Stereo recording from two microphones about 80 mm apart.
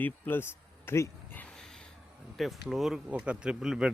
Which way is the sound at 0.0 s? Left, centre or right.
Left.